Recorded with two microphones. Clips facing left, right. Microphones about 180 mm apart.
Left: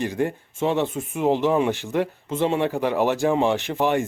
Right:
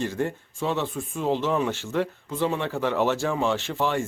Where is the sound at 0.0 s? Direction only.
15° left (ahead or behind).